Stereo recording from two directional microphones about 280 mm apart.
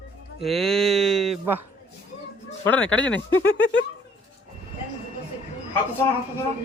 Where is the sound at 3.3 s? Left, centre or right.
Left.